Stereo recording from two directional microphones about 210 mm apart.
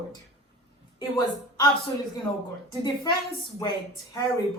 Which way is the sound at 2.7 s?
20° left (ahead or behind).